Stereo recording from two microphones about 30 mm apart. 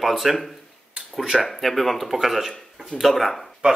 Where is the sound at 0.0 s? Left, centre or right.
Centre.